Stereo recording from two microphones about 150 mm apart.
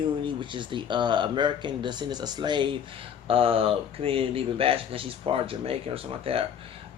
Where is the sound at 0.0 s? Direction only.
30° right (ahead or behind).